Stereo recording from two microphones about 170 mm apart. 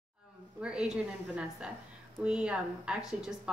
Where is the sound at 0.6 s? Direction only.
5° right (ahead or behind).